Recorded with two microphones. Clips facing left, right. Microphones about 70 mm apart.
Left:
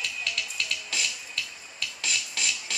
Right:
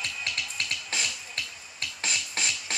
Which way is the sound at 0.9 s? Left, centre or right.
Right.